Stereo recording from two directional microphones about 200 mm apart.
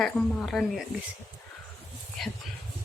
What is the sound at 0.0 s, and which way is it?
Speech, centre (ahead or behind).